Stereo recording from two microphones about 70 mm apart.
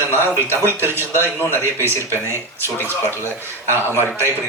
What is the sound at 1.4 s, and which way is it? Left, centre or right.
Speech, left.